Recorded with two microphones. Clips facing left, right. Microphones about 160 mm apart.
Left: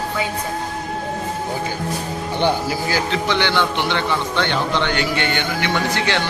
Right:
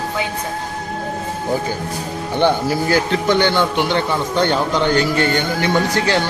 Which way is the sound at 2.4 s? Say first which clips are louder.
Right 4 dB; 55° right (ahead or behind).